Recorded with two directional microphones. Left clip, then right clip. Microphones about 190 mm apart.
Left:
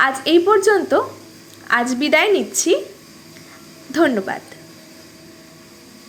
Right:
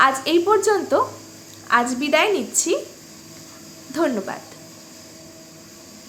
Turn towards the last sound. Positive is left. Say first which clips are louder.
# left 5 dB
turn(degrees=15)  # may be behind; listen again after turning